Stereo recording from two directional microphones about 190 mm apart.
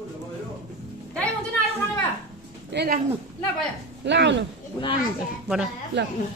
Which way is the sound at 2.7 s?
50° right (ahead or behind).